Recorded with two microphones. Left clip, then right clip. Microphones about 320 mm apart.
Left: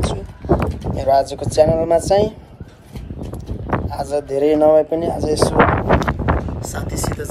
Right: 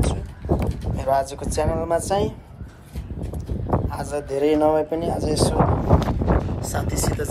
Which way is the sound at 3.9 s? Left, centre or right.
Centre.